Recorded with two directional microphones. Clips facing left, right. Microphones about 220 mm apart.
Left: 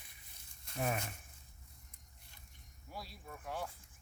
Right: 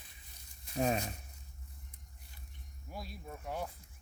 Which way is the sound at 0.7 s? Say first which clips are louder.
Right 5 dB; 20° right (ahead or behind).